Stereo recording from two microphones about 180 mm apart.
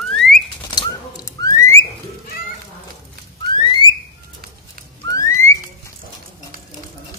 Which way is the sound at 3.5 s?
25° left (ahead or behind).